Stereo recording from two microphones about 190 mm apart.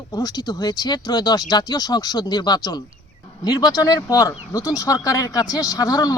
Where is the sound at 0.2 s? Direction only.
20° left (ahead or behind).